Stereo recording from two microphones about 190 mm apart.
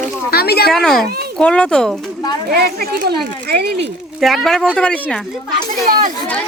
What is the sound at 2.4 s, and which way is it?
Speech, 55° right (ahead or behind).